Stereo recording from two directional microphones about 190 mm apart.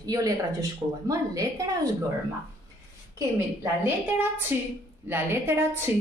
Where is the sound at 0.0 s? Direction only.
20° right (ahead or behind).